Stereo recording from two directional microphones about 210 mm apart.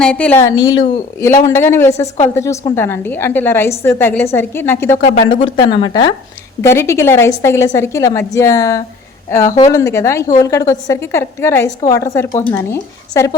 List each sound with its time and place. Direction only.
0.0 s a woman's voice: 5° left (ahead or behind)
5.3 s a woman's voice: 25° left (ahead or behind)